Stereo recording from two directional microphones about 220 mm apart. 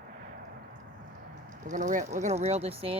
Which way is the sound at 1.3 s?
35° right (ahead or behind).